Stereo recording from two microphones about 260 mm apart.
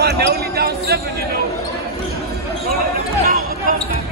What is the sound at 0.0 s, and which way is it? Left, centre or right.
Basketball bounce, right.